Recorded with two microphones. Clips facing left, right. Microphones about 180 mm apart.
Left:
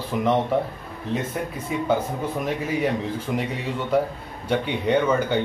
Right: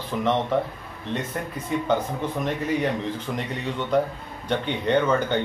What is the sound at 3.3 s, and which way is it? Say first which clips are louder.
Speech: left 3 dB; 5° left (ahead or behind).